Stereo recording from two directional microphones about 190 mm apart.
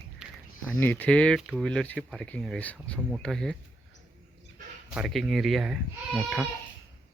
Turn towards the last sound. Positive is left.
turn(degrees=0)  # may be behind; listen again after turning